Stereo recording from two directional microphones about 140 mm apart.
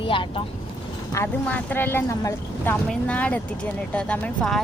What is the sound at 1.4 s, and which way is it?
Speech, 15° left (ahead or behind).